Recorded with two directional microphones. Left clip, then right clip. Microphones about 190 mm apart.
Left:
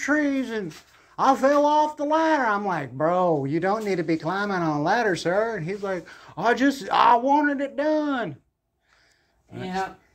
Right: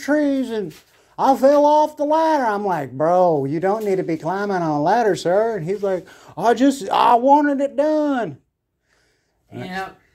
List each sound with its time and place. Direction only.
0.0 s speech: 35° right (ahead or behind)